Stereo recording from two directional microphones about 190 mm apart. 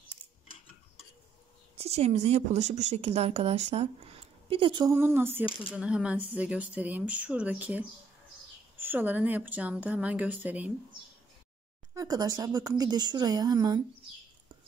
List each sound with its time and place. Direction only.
1.8 s speech: 35° right (ahead or behind)
4.9 s speech: 10° right (ahead or behind)
11.9 s speech: 20° right (ahead or behind)